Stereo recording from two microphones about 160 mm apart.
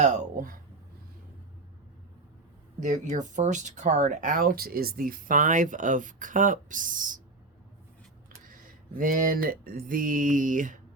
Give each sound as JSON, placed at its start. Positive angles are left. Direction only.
{"t": 0.0, "sound": "speech", "side_deg": -55}
{"t": 2.8, "sound": "speech", "side_deg": -50}
{"t": 9.0, "sound": "speech", "side_deg": -60}